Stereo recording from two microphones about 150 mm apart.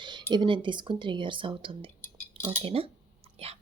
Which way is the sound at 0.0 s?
30° right (ahead or behind).